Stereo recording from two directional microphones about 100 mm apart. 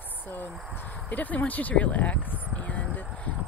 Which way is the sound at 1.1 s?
15° left (ahead or behind).